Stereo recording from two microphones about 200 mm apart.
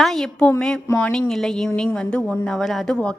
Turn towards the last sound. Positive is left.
turn(degrees=5)  # may be behind; listen again after turning